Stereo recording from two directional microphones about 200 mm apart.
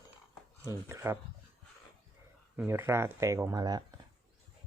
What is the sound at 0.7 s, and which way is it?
Speech, 15° right (ahead or behind).